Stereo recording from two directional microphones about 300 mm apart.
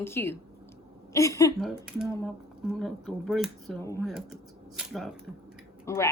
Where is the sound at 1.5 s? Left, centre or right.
Centre.